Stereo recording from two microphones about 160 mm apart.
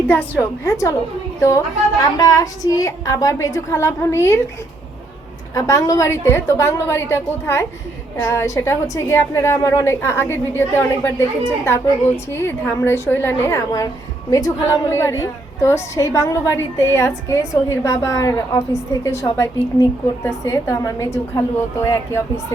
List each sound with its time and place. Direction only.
0.1 s a woman's voice: 10° left (ahead or behind)
5.5 s a woman's voice: 20° left (ahead or behind)